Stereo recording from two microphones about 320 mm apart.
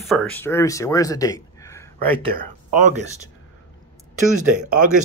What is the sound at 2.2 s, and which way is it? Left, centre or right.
Speech, centre.